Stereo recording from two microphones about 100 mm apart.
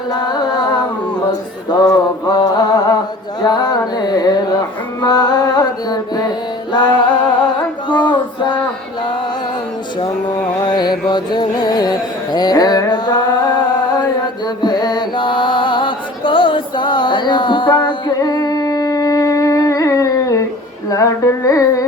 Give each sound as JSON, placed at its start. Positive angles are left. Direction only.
{"t": 0.1, "sound": "music", "side_deg": 45}
{"t": 1.9, "sound": "mantra", "side_deg": 40}
{"t": 3.4, "sound": "a sound", "side_deg": 40}
{"t": 3.9, "sound": "carnatic music", "side_deg": 40}
{"t": 4.9, "sound": "mantra", "side_deg": 40}
{"t": 6.7, "sound": "music", "side_deg": 45}
{"t": 7.9, "sound": "female singing", "side_deg": 50}
{"t": 10.7, "sound": "carnatic music", "side_deg": 45}
{"t": 18.2, "sound": "humming", "side_deg": 40}
{"t": 20.9, "sound": "music", "side_deg": 30}